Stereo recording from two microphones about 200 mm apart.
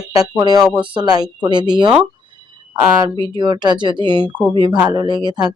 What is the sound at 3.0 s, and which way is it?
Speech, 25° right (ahead or behind).